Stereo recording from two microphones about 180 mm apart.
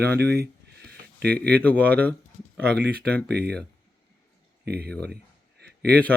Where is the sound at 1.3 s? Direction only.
10° left (ahead or behind).